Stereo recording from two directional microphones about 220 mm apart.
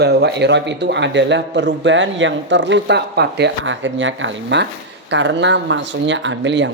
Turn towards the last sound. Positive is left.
turn(degrees=-55)  # may be behind; listen again after turning